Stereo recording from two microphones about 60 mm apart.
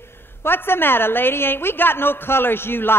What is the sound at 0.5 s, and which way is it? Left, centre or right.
A woman's voice, left.